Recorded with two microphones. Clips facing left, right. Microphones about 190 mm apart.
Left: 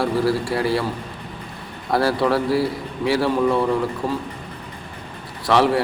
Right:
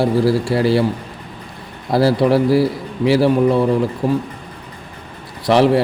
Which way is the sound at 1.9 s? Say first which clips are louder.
Right 5 dB; 25° right (ahead or behind).